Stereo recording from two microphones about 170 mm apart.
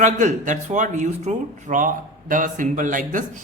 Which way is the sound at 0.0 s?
45° right (ahead or behind).